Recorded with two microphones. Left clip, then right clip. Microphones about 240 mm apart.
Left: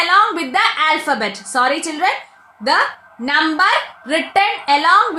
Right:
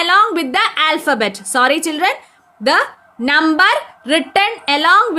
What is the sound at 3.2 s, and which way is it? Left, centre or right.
Speech, right.